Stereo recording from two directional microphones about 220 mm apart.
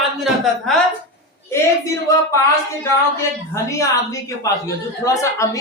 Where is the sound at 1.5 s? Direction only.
15° left (ahead or behind).